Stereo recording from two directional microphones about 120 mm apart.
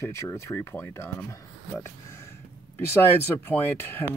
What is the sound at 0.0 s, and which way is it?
Speech, 25° left (ahead or behind).